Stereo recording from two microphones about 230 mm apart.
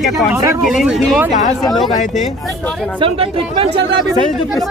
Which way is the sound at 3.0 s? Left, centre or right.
Right.